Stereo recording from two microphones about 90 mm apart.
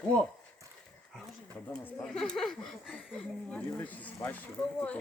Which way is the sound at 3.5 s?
20° left (ahead or behind).